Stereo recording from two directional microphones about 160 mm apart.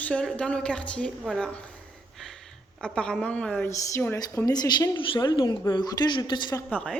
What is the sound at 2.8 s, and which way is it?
A woman's voice, 5° left (ahead or behind).